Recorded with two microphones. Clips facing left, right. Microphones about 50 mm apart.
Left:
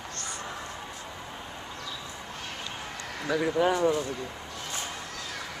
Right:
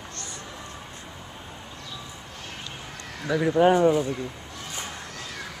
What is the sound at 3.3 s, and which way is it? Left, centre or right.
Speech, centre.